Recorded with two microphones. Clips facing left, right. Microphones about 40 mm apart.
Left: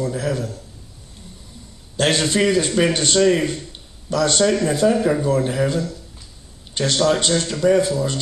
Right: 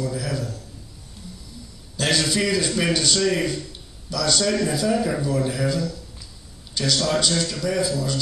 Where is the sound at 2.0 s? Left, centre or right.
Left.